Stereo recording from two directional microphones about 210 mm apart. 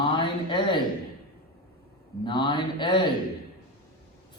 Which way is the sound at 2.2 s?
20° left (ahead or behind).